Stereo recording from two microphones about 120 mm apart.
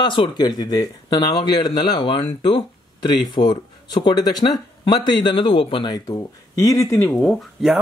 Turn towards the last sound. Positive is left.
turn(degrees=0)  # may be behind; listen again after turning